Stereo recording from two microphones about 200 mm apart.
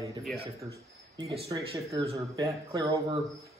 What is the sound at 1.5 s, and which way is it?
Speech, 20° right (ahead or behind).